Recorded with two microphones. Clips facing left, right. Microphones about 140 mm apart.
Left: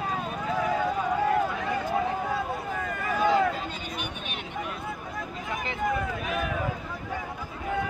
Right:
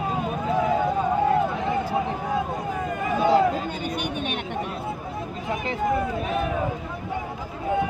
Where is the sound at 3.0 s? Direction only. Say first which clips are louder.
Right 3 dB; 20° right (ahead or behind).